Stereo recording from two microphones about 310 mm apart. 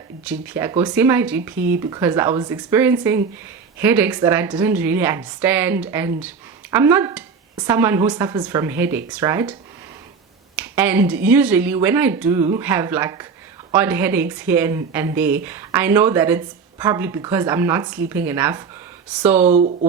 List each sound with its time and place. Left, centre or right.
0.3 s a woman's voice: centre